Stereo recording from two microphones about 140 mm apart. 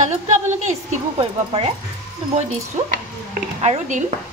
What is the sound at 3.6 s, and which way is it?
Speech, 55° right (ahead or behind).